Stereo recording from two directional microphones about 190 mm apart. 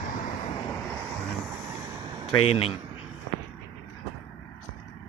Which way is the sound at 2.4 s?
30° left (ahead or behind).